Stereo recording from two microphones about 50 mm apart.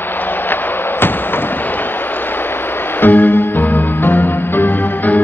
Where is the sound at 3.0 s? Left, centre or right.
Left.